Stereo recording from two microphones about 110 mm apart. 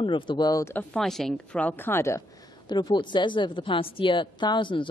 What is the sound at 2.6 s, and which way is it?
A woman's voice, 45° left (ahead or behind).